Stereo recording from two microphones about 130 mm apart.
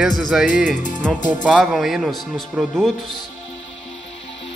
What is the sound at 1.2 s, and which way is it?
Music, 75° left (ahead or behind).